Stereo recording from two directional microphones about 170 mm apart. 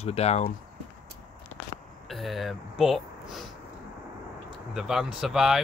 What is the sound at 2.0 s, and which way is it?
Speech, centre (ahead or behind).